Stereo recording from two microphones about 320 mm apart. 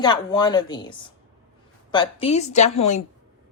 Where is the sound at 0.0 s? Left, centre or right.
Centre.